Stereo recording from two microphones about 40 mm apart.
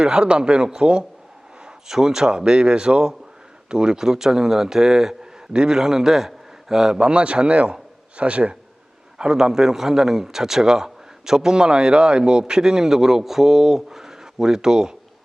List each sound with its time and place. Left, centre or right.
0.0 s speech: right
1.6 s a man's voice: centre; by 8.5 s right
9.1 s a man's voice: centre